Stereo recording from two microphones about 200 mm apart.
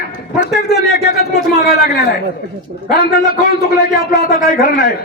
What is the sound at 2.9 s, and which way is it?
A man's voice, 50° left (ahead or behind).